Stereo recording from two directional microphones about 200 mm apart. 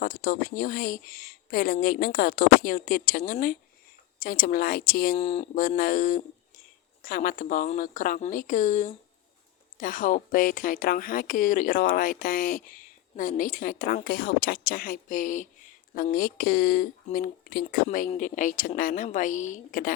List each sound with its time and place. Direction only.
0.0 s speech: 45° left (ahead or behind)
5.1 s a woman's voice: 30° left (ahead or behind)